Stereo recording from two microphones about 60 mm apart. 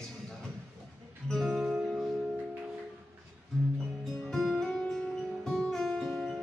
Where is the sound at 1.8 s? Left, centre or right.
Centre.